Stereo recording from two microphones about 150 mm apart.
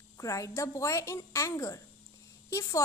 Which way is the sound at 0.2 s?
20° left (ahead or behind).